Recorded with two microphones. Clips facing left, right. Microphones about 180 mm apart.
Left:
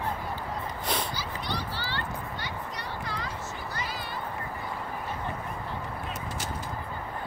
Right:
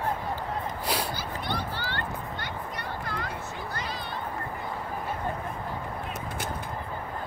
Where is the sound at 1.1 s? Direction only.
55° right (ahead or behind).